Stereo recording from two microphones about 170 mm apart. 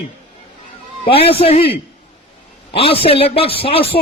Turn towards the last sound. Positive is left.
turn(degrees=35)  # may be behind; listen again after turning